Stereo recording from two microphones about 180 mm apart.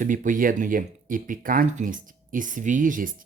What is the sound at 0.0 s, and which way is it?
Speech, 45° right (ahead or behind).